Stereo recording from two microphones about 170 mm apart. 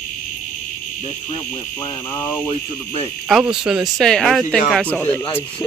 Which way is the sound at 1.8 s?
15° left (ahead or behind).